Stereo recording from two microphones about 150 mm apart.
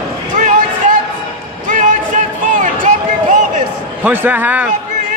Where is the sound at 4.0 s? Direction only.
10° right (ahead or behind).